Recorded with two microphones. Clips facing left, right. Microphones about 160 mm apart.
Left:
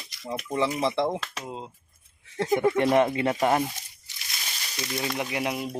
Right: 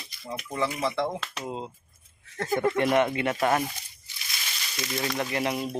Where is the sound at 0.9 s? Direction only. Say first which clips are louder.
Left 3 dB; 25° left (ahead or behind).